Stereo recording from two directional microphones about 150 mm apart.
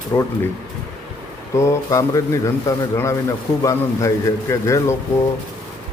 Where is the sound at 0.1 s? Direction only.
20° left (ahead or behind).